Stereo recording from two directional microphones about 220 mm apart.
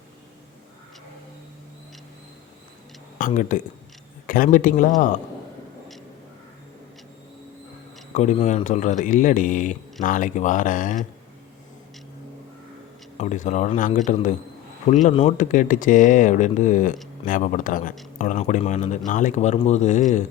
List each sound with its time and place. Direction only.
3.2 s speech: 40° left (ahead or behind)
8.1 s speech: 30° left (ahead or behind)
13.1 s speech: 35° left (ahead or behind)